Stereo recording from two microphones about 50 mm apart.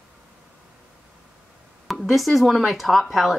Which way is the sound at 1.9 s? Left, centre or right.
Centre.